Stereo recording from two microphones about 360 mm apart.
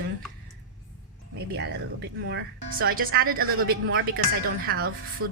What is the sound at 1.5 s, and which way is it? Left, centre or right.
Speech, right.